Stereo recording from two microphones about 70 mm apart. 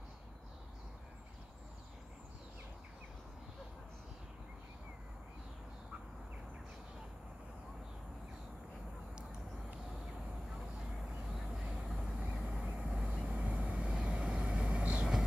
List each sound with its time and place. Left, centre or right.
11.5 s vehicle: centre